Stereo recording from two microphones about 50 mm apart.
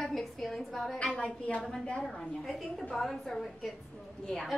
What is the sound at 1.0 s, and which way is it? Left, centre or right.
Speech, left.